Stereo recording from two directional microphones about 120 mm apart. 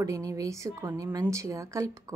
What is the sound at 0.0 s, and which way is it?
Speech, 30° right (ahead or behind).